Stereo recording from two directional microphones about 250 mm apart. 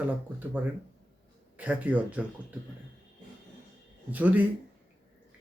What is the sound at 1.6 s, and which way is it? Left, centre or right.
Speech, centre.